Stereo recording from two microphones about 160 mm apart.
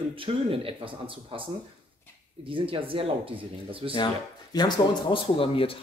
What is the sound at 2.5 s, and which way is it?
Speech, 35° right (ahead or behind).